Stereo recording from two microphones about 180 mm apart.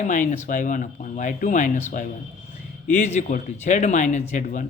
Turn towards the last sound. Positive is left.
turn(degrees=45)  # may be behind; listen again after turning